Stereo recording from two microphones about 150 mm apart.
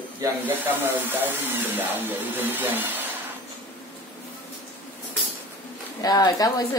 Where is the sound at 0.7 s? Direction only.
15° right (ahead or behind).